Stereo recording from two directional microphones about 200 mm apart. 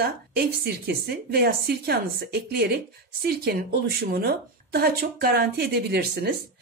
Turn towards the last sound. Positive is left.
turn(degrees=-55)  # may be behind; listen again after turning